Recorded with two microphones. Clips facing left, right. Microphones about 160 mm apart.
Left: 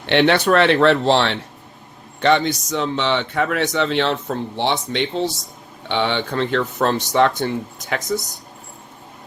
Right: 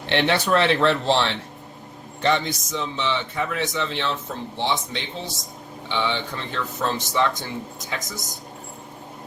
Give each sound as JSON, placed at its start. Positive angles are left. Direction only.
{"t": 0.1, "sound": "speech", "side_deg": 70}